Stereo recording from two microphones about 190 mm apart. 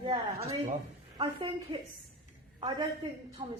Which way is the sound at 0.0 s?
25° right (ahead or behind).